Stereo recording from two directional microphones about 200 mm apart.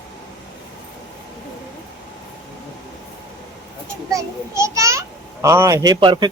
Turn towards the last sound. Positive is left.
turn(degrees=-20)  # may be behind; listen again after turning